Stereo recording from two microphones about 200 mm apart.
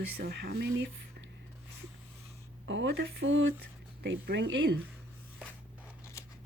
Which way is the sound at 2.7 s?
65° right (ahead or behind).